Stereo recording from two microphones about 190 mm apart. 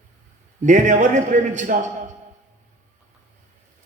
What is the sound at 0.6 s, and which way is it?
A man's voice, 40° right (ahead or behind).